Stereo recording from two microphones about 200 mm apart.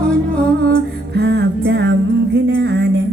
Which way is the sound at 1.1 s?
55° right (ahead or behind).